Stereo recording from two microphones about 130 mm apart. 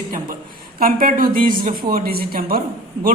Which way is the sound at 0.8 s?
90° right.